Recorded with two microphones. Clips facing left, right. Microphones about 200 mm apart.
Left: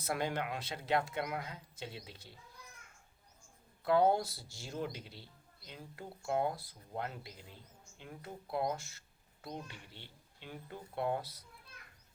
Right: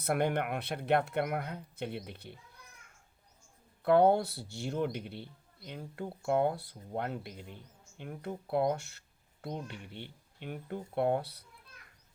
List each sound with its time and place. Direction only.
0.0 s speech: 60° right (ahead or behind)
3.8 s speech: 60° right (ahead or behind)